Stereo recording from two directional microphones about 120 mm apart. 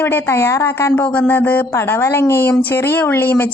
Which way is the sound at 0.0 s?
15° left (ahead or behind).